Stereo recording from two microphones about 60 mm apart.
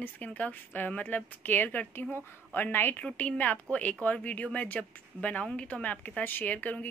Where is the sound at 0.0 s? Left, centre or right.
Left.